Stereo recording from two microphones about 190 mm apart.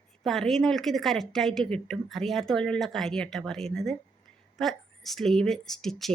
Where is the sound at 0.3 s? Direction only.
Centre (ahead or behind).